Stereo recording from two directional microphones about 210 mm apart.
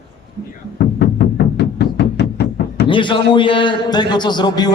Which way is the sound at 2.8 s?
25° left (ahead or behind).